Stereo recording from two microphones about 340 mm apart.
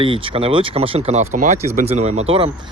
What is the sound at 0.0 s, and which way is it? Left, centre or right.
Speech, centre.